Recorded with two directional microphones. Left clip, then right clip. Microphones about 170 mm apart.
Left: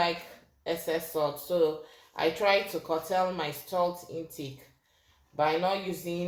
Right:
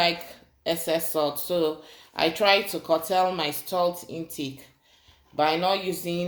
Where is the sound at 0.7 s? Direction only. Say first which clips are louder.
Right 5 dB; 70° right (ahead or behind).